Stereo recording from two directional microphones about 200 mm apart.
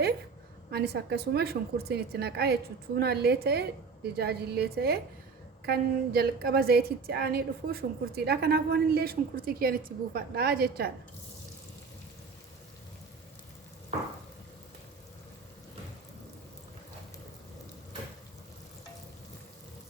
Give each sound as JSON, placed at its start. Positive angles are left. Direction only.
{"t": 0.7, "sound": "a woman's voice", "side_deg": -55}